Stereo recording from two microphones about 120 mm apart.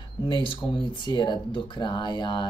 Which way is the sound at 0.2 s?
45° left (ahead or behind).